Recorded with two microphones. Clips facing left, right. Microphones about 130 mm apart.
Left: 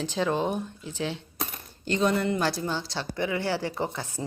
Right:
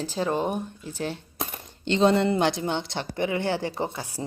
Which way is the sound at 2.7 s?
20° right (ahead or behind).